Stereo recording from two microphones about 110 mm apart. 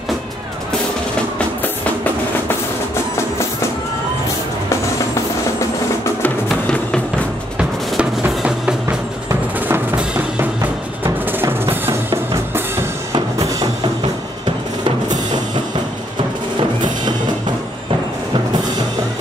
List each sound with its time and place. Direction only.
6.5 s music: 5° left (ahead or behind)
7.5 s drum: 10° right (ahead or behind)
11.3 s drum: 20° right (ahead or behind)
13.1 s music: 35° right (ahead or behind)